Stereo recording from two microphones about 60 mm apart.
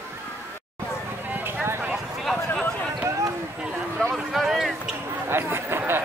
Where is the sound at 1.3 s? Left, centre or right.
Right.